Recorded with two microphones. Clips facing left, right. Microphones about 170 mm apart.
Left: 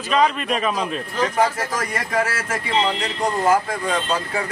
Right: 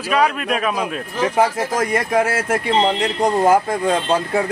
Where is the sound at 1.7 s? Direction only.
55° right (ahead or behind).